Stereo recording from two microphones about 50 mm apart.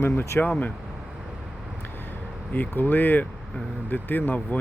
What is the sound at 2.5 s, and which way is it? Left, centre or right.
Speech, left.